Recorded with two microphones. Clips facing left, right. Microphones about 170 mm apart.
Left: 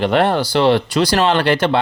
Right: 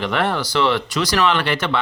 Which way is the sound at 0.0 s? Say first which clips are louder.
Left 6 dB; 30° left (ahead or behind).